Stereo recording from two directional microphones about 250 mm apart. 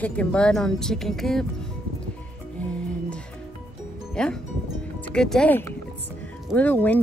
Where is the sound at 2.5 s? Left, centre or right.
Centre.